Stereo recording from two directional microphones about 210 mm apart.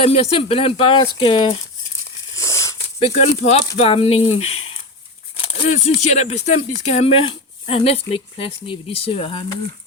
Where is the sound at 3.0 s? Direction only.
30° left (ahead or behind).